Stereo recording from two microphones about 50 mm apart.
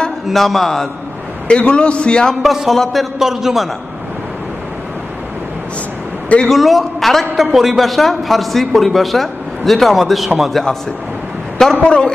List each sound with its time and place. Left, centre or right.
0.3 s a man's voice: centre
1.5 s a man's voice: left
2.4 s a man's voice: centre
6.2 s a man's voice: left
6.5 s a man's voice: centre
11.5 s a sound: centre
11.8 s a man's voice: centre